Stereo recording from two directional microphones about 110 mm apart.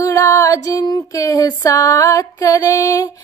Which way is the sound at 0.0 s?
30° left (ahead or behind).